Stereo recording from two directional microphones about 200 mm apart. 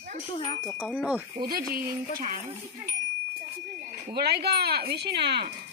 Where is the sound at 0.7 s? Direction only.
5° left (ahead or behind).